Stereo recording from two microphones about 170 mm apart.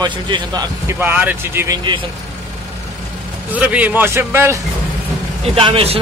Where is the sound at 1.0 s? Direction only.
10° right (ahead or behind).